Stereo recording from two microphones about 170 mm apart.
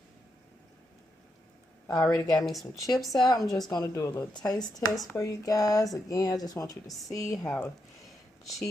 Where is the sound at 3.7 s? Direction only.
20° left (ahead or behind).